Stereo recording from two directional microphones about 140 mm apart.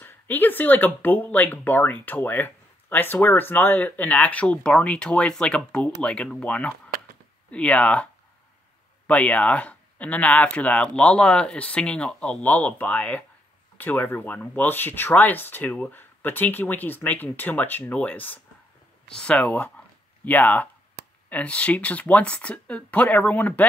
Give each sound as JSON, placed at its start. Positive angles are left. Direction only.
{"t": 0.0, "sound": "speech", "side_deg": 15}
{"t": 6.9, "sound": "a sound", "side_deg": -90}
{"t": 7.5, "sound": "speech", "side_deg": 10}